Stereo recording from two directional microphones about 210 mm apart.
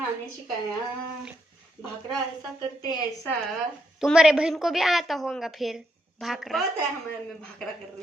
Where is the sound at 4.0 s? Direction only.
5° right (ahead or behind).